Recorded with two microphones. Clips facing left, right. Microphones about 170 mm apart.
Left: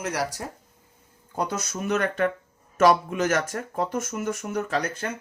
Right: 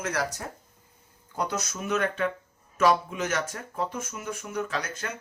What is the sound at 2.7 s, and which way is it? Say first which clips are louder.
Speech: left 4 dB; 45° left (ahead or behind).